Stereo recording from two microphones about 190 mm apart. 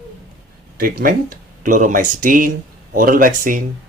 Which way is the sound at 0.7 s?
50° right (ahead or behind).